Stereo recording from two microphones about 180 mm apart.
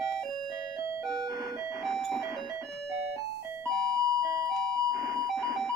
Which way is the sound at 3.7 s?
20° right (ahead or behind).